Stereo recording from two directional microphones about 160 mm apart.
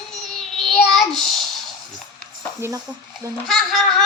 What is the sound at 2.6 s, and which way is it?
Speech, 15° right (ahead or behind).